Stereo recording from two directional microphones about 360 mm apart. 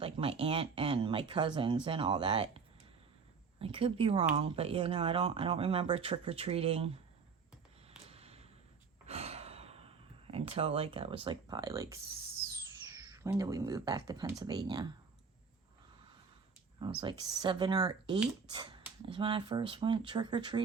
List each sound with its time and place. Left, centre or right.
0.0 s speech: centre
3.6 s speech: centre
7.9 s a sound: centre
9.0 s sigh: centre
10.3 s speech: centre
13.0 s speech: centre
17.0 s speech: centre